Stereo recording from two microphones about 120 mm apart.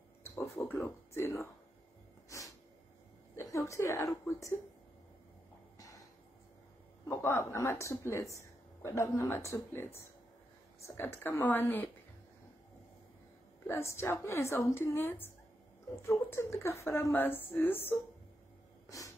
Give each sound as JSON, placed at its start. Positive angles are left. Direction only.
{"t": 0.7, "sound": "a woman's voice", "side_deg": 20}
{"t": 3.3, "sound": "a woman's voice", "side_deg": 25}
{"t": 5.8, "sound": "a sound", "side_deg": 30}
{"t": 7.1, "sound": "a woman's voice", "side_deg": 20}
{"t": 13.7, "sound": "a woman's voice", "side_deg": 20}
{"t": 18.9, "sound": "snort", "side_deg": 25}